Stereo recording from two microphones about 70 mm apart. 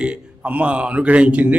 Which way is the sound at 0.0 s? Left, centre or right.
Centre.